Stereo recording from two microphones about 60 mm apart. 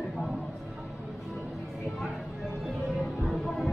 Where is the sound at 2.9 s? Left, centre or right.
Centre.